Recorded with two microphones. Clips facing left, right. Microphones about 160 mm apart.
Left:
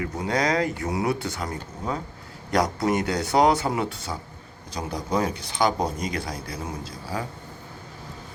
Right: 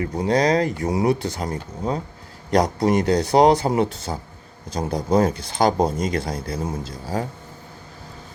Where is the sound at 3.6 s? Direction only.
25° right (ahead or behind).